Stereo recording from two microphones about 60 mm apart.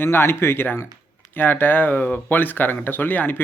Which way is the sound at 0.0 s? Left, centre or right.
Left.